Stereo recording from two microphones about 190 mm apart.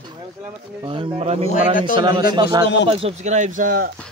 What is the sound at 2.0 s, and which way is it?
Speech, 25° right (ahead or behind).